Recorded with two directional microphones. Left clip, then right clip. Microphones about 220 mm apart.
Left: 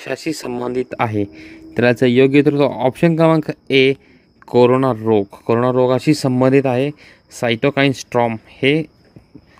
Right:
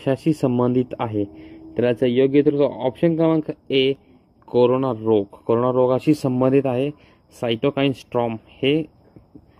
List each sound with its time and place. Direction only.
0.0 s speech: 25° left (ahead or behind)
3.6 s speech: 90° left
4.5 s speech: 30° left (ahead or behind)